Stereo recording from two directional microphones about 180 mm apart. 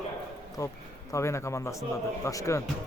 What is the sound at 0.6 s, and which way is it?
A man's voice, 20° left (ahead or behind).